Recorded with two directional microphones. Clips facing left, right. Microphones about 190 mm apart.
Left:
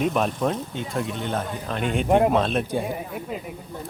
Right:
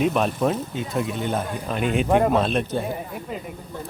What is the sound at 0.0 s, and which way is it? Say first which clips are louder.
Speech: right 2 dB; centre (ahead or behind).